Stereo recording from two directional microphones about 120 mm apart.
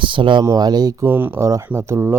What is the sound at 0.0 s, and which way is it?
Speech, 45° right (ahead or behind).